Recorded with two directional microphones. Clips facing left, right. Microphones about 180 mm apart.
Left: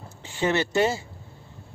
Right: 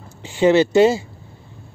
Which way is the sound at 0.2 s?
15° right (ahead or behind).